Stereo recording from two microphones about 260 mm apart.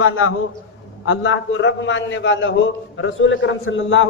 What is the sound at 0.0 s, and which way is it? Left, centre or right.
A man's voice, left.